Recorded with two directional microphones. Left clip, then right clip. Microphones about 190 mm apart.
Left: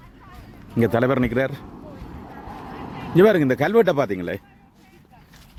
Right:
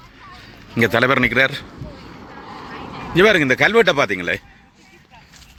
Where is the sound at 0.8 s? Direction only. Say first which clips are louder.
Right 5 dB; 15° left (ahead or behind).